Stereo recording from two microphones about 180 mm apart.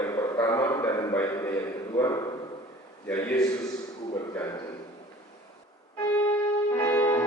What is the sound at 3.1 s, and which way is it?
Speech, 10° left (ahead or behind).